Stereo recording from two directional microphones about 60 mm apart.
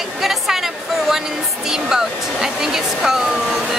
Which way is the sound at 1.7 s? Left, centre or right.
Centre.